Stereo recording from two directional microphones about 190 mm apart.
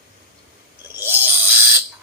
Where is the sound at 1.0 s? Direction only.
10° right (ahead or behind).